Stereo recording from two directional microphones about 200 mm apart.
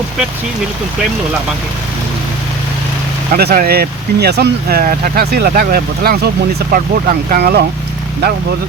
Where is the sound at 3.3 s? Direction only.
50° right (ahead or behind).